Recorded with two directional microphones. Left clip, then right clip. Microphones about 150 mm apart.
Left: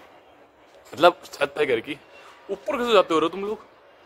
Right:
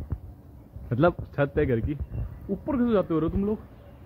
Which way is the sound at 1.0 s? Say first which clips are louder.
Left 5 dB; 15° left (ahead or behind).